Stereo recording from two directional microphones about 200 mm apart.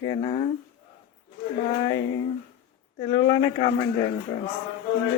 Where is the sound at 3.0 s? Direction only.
20° left (ahead or behind).